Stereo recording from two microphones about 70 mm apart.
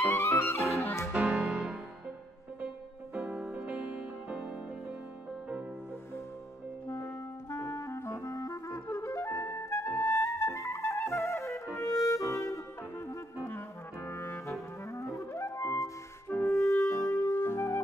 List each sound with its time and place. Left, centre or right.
0.1 s music: left
1.1 s music: centre
1.4 s music: centre
3.2 s music: centre
7.4 s clarinet: left
8.4 s clarinet: left
10.0 s music: left
11.8 s clarinet: left
13.5 s clarinet: left
16.3 s music: left
17.3 s music: left